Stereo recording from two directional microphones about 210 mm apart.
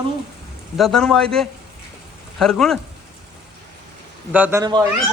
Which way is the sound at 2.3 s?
Centre (ahead or behind).